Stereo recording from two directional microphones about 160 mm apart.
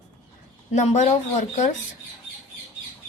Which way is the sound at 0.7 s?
45° left (ahead or behind).